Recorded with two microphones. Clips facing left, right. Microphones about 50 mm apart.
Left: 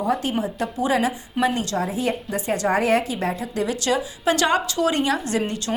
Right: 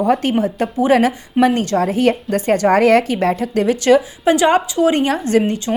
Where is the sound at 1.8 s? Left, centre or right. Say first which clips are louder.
Right 8 dB; right.